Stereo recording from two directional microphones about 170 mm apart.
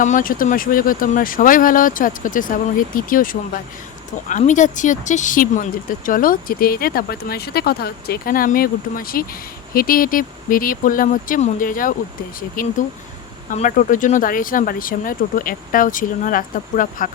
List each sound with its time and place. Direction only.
0.0 s speech: 50° left (ahead or behind)